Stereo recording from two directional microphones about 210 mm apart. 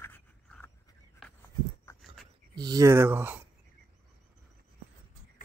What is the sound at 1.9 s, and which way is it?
Dog, 15° left (ahead or behind).